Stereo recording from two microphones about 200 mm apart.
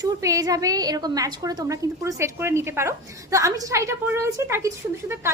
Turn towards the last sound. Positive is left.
turn(degrees=-15)  # may be behind; listen again after turning